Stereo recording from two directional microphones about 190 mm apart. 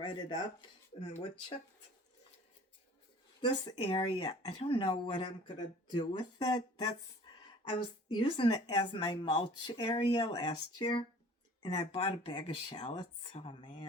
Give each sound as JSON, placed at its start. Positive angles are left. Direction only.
{"t": 0.0, "sound": "speech", "side_deg": 25}
{"t": 3.4, "sound": "speech", "side_deg": 25}